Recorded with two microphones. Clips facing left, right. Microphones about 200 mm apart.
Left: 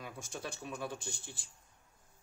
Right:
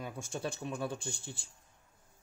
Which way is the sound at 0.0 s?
30° right (ahead or behind).